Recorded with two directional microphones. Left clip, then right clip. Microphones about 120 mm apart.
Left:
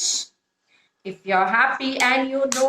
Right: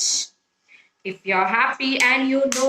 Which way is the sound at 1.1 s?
40° left (ahead or behind).